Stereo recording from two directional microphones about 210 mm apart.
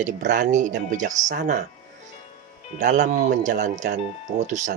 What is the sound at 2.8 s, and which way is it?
Speech, 35° right (ahead or behind).